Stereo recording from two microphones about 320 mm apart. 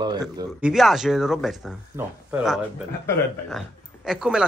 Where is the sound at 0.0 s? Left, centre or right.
Centre.